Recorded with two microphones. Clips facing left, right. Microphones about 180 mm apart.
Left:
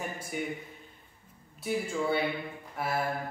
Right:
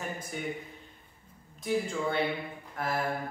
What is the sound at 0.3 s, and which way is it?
Speech, 10° left (ahead or behind).